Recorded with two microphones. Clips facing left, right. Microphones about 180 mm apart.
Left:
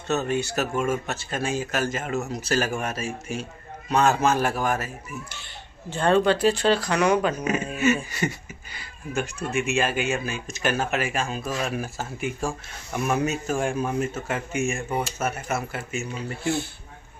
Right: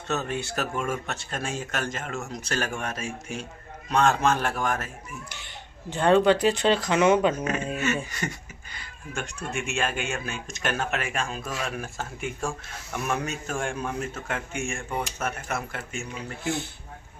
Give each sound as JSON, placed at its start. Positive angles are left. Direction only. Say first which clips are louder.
{"t": 0.1, "sound": "a man's voice", "louder": "left 4 dB", "side_deg": 0}
{"t": 5.3, "sound": "speech", "louder": "even", "side_deg": -15}
{"t": 7.7, "sound": "speech", "louder": "left 5 dB", "side_deg": 10}